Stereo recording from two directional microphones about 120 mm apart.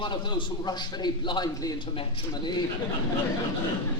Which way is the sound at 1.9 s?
45° left (ahead or behind).